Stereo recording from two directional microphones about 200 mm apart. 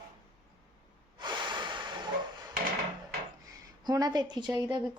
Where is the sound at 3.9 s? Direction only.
20° right (ahead or behind).